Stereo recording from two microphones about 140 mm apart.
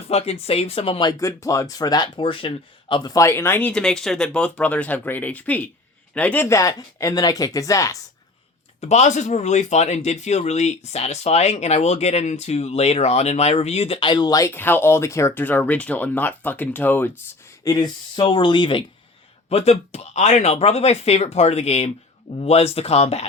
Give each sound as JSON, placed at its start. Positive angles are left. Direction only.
{"t": 0.1, "sound": "speech", "side_deg": 45}
{"t": 1.2, "sound": "speech", "side_deg": 20}
{"t": 8.8, "sound": "speech", "side_deg": 55}
{"t": 17.6, "sound": "speech", "side_deg": 25}
{"t": 19.5, "sound": "speech", "side_deg": 45}